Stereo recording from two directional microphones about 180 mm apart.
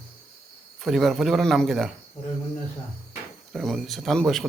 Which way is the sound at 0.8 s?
Centre (ahead or behind).